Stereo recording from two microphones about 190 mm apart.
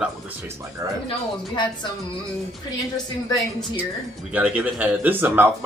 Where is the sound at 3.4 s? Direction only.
Centre (ahead or behind).